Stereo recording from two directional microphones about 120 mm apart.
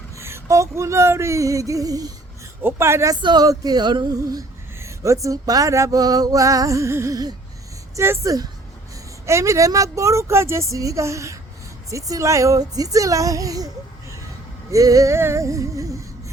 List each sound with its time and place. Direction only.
0.2 s female singing: 20° right (ahead or behind)
2.6 s female singing: 20° right (ahead or behind)
3.2 s female singing: 35° right (ahead or behind)
14.7 s female singing: 30° right (ahead or behind)